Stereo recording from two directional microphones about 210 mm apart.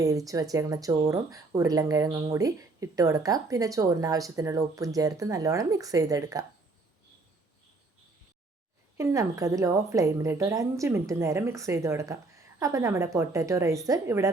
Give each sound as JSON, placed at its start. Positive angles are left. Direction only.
{"t": 0.0, "sound": "speech", "side_deg": -15}
{"t": 9.0, "sound": "speech", "side_deg": -15}